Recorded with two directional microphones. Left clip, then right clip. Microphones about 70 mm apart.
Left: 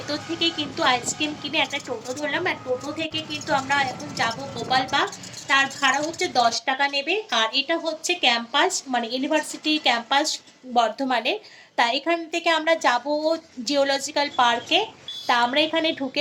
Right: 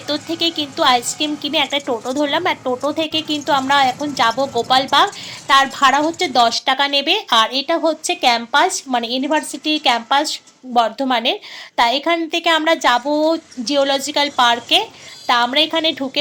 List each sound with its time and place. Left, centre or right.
0.3 s a woman's voice: right
5.9 s speech: right